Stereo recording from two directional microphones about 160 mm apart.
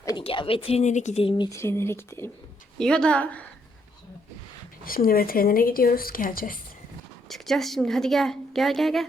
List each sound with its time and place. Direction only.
0.2 s speech: 35° left (ahead or behind)
1.5 s speech: 15° left (ahead or behind)
2.7 s speech: 5° left (ahead or behind)
4.9 s speech: 65° left (ahead or behind)
7.3 s a woman's voice: centre (ahead or behind)